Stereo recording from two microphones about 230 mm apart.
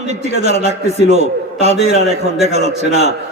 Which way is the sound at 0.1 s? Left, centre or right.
Right.